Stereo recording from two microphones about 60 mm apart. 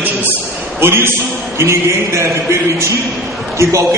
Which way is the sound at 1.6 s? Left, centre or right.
Right.